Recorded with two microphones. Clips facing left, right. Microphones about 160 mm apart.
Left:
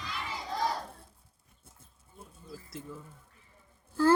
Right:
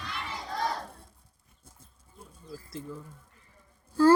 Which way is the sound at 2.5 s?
5° left (ahead or behind).